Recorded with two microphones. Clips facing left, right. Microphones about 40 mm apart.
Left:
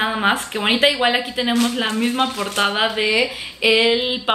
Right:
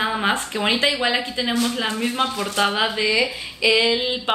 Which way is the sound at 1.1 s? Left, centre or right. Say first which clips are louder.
Left 2 dB; centre.